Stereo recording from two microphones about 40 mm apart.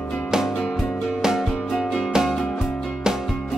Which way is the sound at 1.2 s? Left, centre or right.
Centre.